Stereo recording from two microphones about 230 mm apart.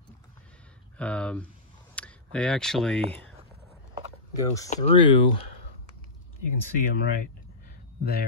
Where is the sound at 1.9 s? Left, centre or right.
Centre.